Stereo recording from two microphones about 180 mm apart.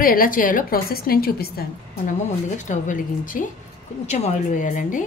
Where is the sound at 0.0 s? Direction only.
50° left (ahead or behind).